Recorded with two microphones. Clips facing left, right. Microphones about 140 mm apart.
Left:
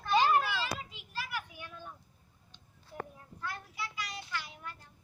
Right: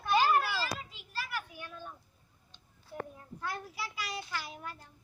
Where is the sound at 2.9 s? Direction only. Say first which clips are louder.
Right 2 dB; centre (ahead or behind).